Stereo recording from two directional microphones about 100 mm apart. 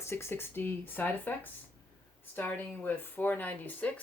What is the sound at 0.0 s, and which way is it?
Speech, 25° left (ahead or behind).